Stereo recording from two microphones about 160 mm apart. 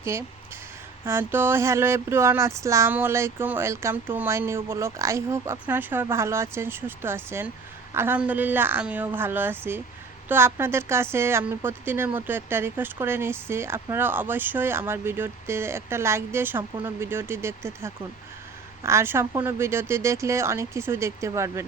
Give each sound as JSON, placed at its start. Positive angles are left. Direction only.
{"t": 0.0, "sound": "a woman's voice", "side_deg": -15}